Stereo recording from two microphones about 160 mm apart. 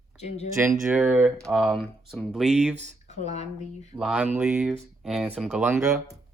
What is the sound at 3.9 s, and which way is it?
Speech, 5° right (ahead or behind).